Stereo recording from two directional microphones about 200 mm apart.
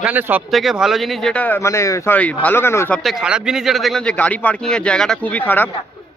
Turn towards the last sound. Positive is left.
turn(degrees=10)  # may be behind; listen again after turning